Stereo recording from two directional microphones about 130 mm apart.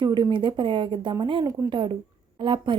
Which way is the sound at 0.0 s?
35° right (ahead or behind).